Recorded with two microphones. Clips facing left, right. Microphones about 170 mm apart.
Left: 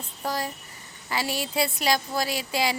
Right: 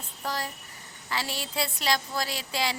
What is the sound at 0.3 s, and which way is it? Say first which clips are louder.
A woman's voice: left 3 dB; 10° left (ahead or behind).